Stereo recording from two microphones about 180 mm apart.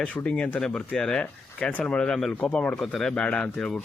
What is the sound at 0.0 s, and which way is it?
Speech, 5° left (ahead or behind).